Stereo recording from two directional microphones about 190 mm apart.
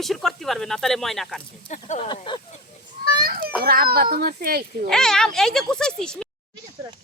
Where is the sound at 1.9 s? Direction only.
35° left (ahead or behind).